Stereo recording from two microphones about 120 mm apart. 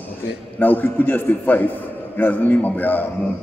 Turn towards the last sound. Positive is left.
turn(degrees=15)  # may be behind; listen again after turning